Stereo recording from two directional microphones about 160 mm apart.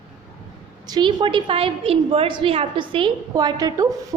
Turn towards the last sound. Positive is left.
turn(degrees=-20)  # may be behind; listen again after turning